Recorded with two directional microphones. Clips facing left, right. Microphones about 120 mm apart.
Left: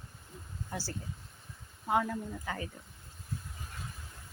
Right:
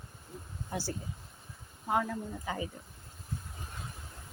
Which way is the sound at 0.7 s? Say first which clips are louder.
Right 4 dB; 15° right (ahead or behind).